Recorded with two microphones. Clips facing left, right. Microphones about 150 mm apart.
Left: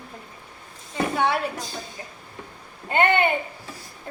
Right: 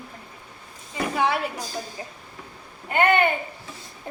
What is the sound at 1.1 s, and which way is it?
Speech, 5° right (ahead or behind).